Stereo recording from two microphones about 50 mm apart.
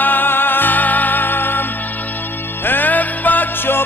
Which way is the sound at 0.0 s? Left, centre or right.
Left.